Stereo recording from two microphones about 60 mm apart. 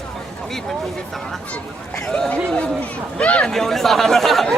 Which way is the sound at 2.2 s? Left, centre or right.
Left.